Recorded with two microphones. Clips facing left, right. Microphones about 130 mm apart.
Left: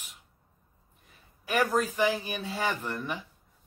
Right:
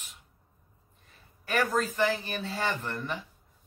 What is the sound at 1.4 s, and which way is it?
Speech, 15° left (ahead or behind).